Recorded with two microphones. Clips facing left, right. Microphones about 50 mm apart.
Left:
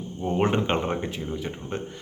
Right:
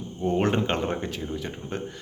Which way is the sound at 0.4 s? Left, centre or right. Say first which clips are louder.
Left 1 dB; centre.